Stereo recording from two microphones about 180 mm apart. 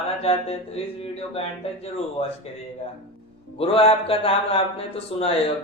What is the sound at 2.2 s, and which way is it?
Speech, 30° left (ahead or behind).